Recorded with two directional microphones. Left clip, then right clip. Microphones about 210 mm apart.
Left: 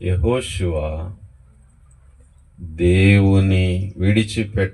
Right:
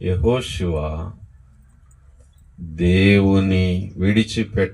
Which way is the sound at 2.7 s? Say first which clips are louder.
Even; 20° right (ahead or behind).